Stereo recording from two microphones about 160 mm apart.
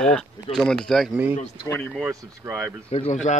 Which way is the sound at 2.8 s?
40° left (ahead or behind).